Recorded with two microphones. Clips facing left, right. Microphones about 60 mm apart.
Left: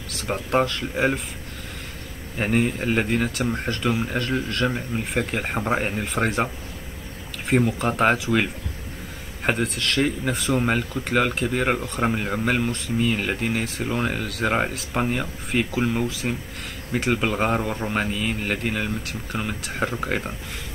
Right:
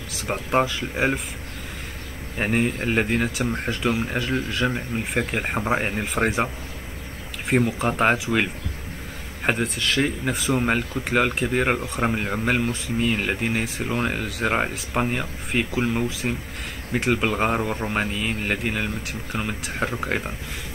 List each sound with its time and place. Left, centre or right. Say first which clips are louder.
0.1 s speech: even; centre
2.3 s speech: left 1 dB; centre